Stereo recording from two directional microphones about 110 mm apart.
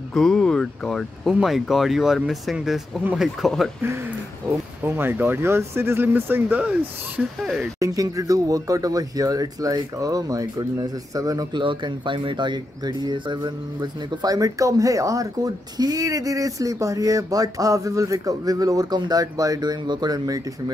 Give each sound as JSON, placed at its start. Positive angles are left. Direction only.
{"t": 0.1, "sound": "speech", "side_deg": 5}
{"t": 4.8, "sound": "speech", "side_deg": -20}
{"t": 7.8, "sound": "speech", "side_deg": -30}
{"t": 11.6, "sound": "speech", "side_deg": -50}